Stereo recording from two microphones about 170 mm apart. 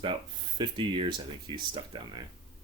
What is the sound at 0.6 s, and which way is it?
Speech, 30° right (ahead or behind).